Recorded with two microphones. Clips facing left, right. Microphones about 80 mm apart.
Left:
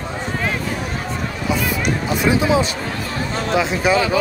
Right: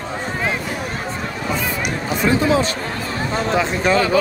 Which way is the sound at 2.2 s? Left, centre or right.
Centre.